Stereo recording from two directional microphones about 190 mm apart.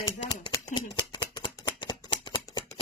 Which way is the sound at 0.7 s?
20° left (ahead or behind).